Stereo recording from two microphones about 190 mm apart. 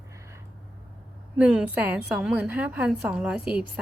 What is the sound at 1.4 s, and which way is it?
A woman's voice, 5° right (ahead or behind).